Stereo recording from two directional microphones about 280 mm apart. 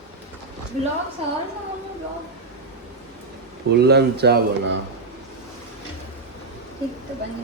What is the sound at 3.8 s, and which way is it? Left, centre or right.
Speech, right.